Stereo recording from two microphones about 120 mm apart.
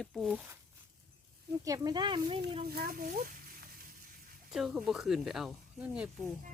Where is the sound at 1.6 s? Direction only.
30° right (ahead or behind); by 2.6 s 50° right (ahead or behind).